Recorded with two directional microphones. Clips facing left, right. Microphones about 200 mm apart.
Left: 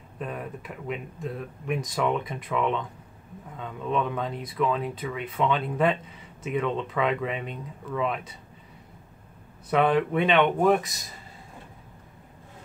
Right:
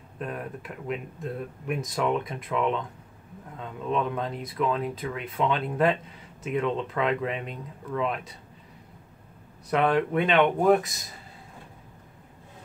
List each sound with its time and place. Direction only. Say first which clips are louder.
0.2 s speech: even; centre (ahead or behind)
9.7 s speech: left 1 dB; centre (ahead or behind)